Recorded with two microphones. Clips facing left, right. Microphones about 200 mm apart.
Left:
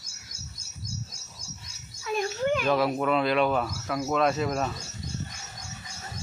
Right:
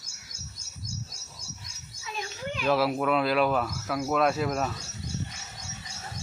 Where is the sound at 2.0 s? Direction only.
50° left (ahead or behind).